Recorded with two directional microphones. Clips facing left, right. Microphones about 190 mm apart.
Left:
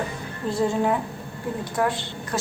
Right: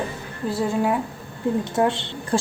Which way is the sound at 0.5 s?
5° right (ahead or behind).